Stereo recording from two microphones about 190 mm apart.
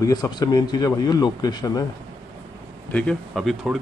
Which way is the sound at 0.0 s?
20° left (ahead or behind).